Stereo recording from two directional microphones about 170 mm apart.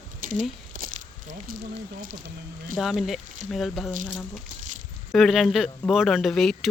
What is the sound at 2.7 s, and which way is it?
Speech, centre (ahead or behind).